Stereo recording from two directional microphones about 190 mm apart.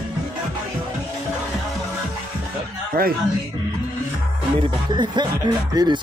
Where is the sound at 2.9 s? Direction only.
50° right (ahead or behind).